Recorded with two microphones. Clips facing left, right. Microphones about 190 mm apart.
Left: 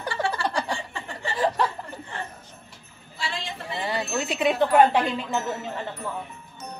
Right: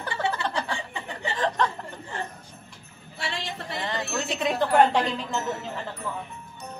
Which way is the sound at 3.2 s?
70° right (ahead or behind).